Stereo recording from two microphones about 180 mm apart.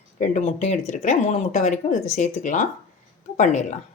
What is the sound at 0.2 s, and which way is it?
Speech, 40° left (ahead or behind).